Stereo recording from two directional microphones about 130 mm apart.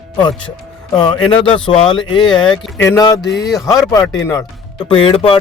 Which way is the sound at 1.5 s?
40° left (ahead or behind).